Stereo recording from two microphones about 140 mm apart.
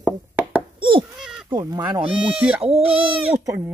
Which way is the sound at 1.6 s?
20° right (ahead or behind).